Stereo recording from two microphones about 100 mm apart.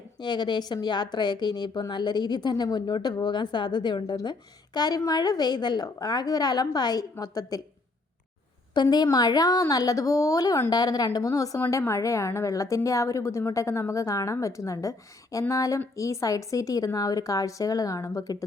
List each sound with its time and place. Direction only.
0.2 s a woman's voice: 50° left (ahead or behind)
8.7 s a woman's voice: 45° left (ahead or behind)